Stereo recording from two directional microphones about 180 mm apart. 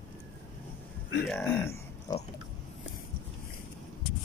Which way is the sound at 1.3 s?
15° left (ahead or behind).